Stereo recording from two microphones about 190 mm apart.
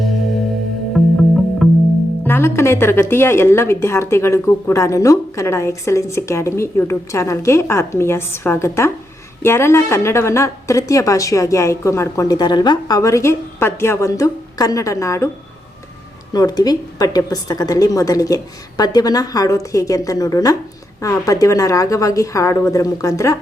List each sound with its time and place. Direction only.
1.0 s music: centre (ahead or behind)
2.2 s a woman's voice: 10° left (ahead or behind)
16.3 s a woman's voice: 20° left (ahead or behind)